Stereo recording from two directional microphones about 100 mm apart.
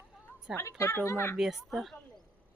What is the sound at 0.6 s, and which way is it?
Speech, 30° left (ahead or behind).